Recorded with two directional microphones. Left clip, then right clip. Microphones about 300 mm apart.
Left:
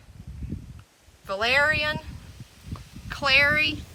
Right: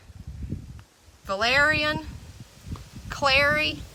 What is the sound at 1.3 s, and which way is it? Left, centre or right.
Speech, centre.